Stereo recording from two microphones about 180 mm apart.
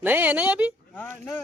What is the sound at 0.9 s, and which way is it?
Speech, 10° left (ahead or behind).